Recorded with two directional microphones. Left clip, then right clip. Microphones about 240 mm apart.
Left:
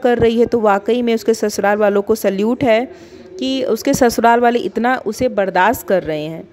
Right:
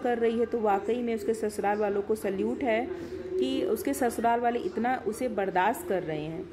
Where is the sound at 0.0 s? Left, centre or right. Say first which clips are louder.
Left 14 dB; left.